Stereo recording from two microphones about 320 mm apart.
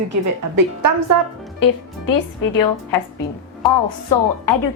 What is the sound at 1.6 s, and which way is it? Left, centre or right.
Speech, left.